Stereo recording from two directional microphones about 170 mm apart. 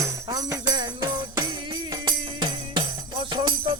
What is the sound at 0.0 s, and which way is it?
Jingle bell, 20° right (ahead or behind).